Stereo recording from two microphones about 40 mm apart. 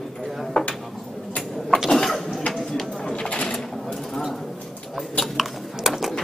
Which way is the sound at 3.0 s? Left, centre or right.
Left.